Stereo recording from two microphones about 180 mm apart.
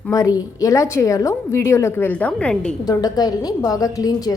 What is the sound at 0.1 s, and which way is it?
A woman's voice, 20° left (ahead or behind).